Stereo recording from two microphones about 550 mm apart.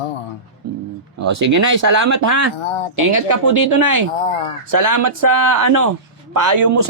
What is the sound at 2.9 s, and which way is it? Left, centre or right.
A man's voice, right.